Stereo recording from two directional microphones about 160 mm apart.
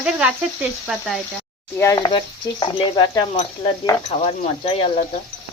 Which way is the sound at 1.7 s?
15° left (ahead or behind).